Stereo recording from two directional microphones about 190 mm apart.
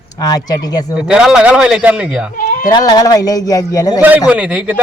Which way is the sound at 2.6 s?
20° left (ahead or behind).